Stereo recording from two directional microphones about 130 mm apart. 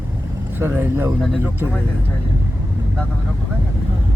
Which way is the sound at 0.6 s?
15° right (ahead or behind).